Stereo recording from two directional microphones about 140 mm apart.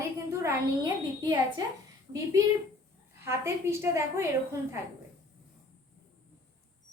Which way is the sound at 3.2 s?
20° right (ahead or behind).